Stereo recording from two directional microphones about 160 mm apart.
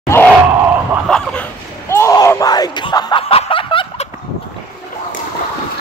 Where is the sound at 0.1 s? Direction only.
15° left (ahead or behind).